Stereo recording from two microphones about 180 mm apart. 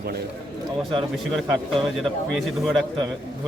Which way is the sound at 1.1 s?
Centre (ahead or behind).